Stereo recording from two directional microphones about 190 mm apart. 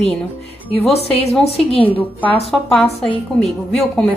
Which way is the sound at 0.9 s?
35° left (ahead or behind).